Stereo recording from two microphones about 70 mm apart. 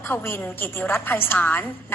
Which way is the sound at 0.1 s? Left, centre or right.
Left.